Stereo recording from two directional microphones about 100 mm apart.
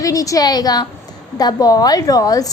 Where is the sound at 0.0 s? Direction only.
35° left (ahead or behind).